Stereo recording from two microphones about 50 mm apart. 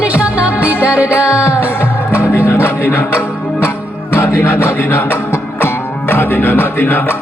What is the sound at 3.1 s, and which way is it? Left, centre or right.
Music, left.